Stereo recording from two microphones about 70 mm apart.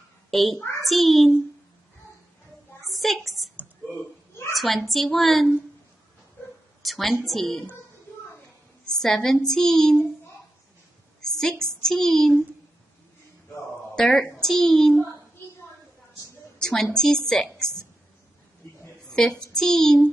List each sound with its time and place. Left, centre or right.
0.3 s a child's voice: centre
0.6 s a sound: left
0.8 s a woman's voice: centre
2.9 s a sound: centre
3.9 s a sound: left
4.6 s a woman's voice: centre
6.8 s a woman's voice: centre
8.8 s a woman's voice: centre
11.1 s a woman's voice: centre
13.9 s a woman's voice: centre
16.5 s a sound: centre
16.9 s a woman's voice: centre
19.0 s child singing: centre